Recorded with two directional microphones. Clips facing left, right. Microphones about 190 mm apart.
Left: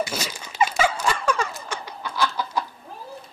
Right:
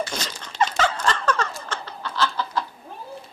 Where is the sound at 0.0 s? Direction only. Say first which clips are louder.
Left 1 dB; 10° left (ahead or behind).